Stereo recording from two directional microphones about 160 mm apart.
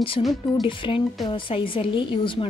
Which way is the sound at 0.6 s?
30° left (ahead or behind).